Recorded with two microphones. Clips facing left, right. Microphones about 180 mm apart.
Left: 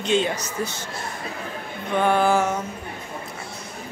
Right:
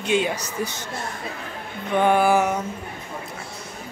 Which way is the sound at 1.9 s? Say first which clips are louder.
Right 1 dB; 15° right (ahead or behind).